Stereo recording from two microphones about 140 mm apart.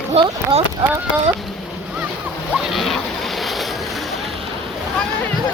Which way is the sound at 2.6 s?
Centre (ahead or behind).